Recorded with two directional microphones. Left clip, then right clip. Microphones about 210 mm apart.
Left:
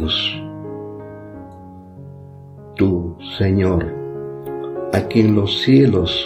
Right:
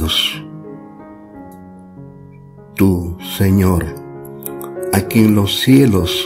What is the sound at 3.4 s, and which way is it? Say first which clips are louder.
Speech: right 1 dB; 45° right (ahead or behind).